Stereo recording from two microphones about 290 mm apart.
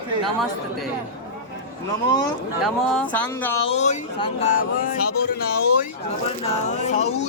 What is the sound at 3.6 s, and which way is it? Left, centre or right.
Speech, left.